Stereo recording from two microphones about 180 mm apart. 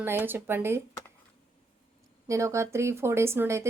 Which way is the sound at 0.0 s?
10° right (ahead or behind).